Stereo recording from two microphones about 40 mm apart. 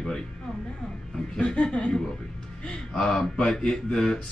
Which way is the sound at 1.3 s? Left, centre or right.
Left.